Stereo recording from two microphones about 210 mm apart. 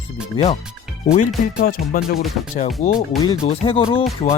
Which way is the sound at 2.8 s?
35° left (ahead or behind).